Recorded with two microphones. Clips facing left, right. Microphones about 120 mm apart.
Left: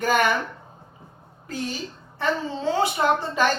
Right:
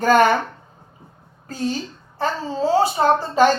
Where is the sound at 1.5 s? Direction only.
40° right (ahead or behind).